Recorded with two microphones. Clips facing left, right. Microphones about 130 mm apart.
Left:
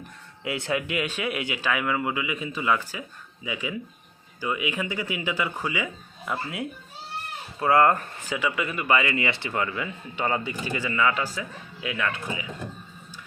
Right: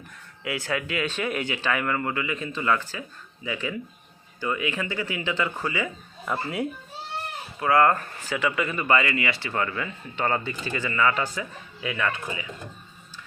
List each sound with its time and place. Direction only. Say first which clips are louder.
0.4 s speech: left 1 dB; 25° left (ahead or behind); by 6.7 s centre (ahead or behind)
7.6 s speech: even; 25° left (ahead or behind)
9.1 s speech: even; 20° left (ahead or behind)
9.5 s speech: even; 10° left (ahead or behind)